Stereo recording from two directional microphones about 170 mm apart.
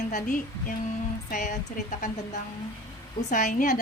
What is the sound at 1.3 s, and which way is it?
Speech, 50° left (ahead or behind).